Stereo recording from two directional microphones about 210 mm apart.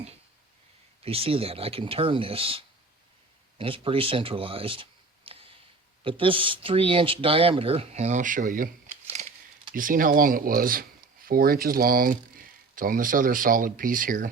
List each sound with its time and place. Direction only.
1.0 s speech: 25° right (ahead or behind)
9.7 s speech: 40° right (ahead or behind)